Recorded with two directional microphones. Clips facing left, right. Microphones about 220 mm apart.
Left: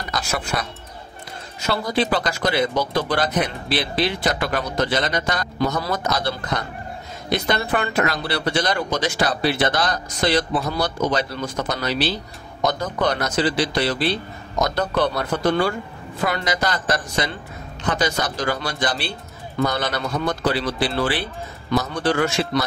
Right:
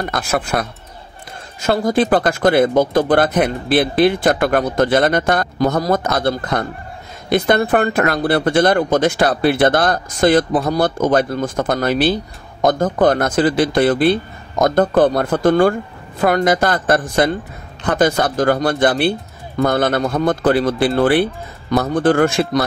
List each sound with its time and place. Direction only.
0.0 s speech: 55° right (ahead or behind)